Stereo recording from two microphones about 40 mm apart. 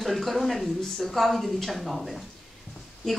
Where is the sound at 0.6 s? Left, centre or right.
Centre.